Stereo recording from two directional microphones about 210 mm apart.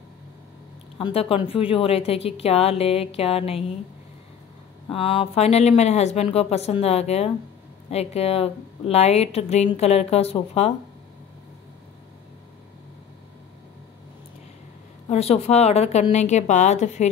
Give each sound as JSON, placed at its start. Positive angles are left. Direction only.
{"t": 0.9, "sound": "speech", "side_deg": 25}
{"t": 4.8, "sound": "speech", "side_deg": 25}
{"t": 15.0, "sound": "a woman's voice", "side_deg": 30}